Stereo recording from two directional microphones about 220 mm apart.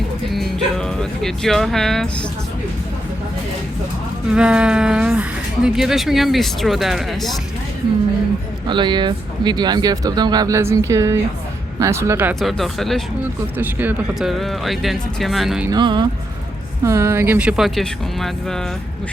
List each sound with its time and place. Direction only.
0.3 s speech: centre (ahead or behind)
4.3 s speech: 5° right (ahead or behind)
8.6 s speech: 20° right (ahead or behind); by 15.7 s centre (ahead or behind)
15.7 s speech: 20° right (ahead or behind); by 18.6 s centre (ahead or behind)